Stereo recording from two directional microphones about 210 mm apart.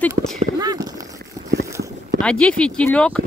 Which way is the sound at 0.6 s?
20° right (ahead or behind).